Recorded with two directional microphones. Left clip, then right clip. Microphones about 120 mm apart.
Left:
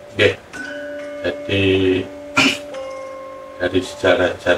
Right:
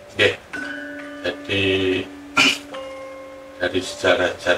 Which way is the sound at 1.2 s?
15° left (ahead or behind).